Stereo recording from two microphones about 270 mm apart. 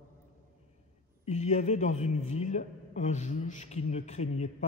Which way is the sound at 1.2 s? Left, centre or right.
Left.